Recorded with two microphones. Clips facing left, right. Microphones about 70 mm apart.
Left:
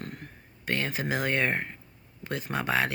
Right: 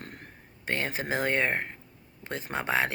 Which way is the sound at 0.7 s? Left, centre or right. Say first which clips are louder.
Left 1 dB; right.